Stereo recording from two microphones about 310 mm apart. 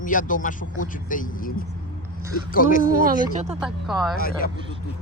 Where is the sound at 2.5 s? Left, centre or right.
Left.